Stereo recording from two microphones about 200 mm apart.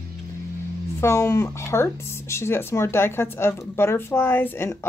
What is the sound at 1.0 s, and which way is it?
Speech, 15° left (ahead or behind).